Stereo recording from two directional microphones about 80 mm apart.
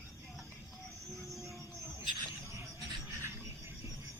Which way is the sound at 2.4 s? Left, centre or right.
Right.